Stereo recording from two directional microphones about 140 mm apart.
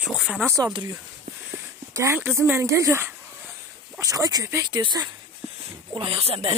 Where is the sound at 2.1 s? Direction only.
15° right (ahead or behind).